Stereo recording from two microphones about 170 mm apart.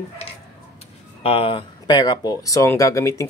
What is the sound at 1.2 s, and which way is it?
Speech, 35° left (ahead or behind).